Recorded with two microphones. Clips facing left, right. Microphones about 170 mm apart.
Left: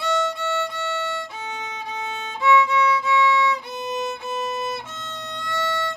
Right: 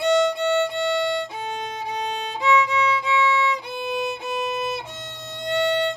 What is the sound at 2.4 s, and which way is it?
Violin, 20° right (ahead or behind).